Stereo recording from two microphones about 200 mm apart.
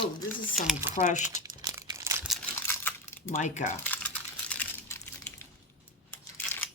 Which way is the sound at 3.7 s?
10° left (ahead or behind).